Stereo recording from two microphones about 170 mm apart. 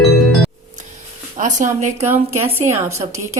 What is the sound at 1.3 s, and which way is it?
Speech, 50° right (ahead or behind).